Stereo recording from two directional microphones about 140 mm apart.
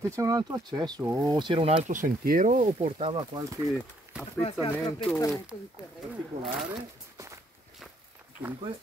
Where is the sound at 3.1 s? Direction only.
30° right (ahead or behind).